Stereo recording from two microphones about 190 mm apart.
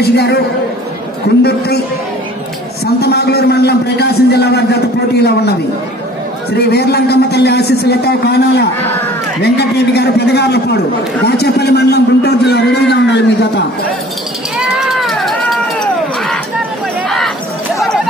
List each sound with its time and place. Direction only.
0.0 s a man's voice: 60° left (ahead or behind)
3.0 s a man's voice: 60° left (ahead or behind)
6.5 s a man's voice: 55° left (ahead or behind)
14.6 s music: centre (ahead or behind)